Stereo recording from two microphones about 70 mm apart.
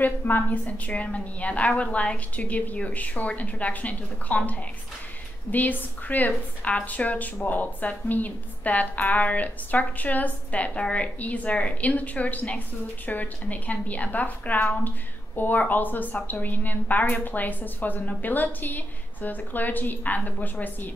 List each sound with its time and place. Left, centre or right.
0.0 s a woman's voice: left